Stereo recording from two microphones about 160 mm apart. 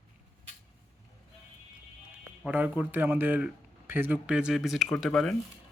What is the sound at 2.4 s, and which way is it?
Speech, 10° right (ahead or behind).